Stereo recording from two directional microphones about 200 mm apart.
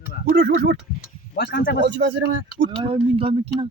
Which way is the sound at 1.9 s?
60° right (ahead or behind).